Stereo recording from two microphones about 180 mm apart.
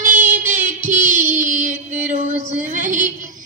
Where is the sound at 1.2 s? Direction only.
10° right (ahead or behind).